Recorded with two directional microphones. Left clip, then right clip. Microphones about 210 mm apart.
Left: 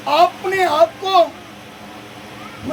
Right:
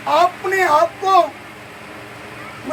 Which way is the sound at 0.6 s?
20° left (ahead or behind).